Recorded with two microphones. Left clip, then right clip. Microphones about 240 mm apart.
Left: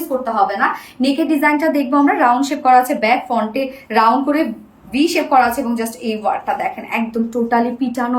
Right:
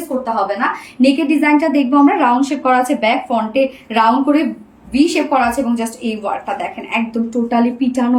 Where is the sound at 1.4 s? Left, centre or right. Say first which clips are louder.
Right 1 dB; centre.